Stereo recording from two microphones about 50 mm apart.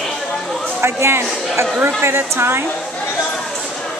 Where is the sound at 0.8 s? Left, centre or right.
Right.